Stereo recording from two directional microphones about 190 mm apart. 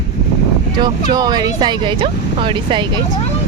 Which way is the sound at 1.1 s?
20° right (ahead or behind).